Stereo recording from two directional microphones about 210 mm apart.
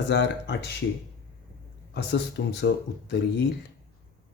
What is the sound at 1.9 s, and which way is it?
Speech, 55° left (ahead or behind).